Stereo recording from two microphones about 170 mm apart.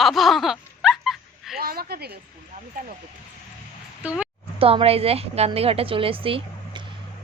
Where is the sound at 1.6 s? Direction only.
65° right (ahead or behind).